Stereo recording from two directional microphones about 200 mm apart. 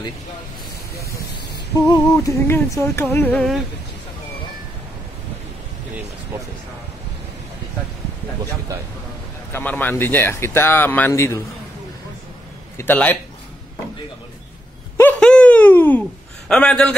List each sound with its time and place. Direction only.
0.9 s a sound: 15° left (ahead or behind)
1.9 s speech: 15° left (ahead or behind)
9.5 s speech: 10° left (ahead or behind)
12.7 s speech: 10° left (ahead or behind)
15.0 s a sound: 5° left (ahead or behind)
16.4 s a man's voice: 5° left (ahead or behind)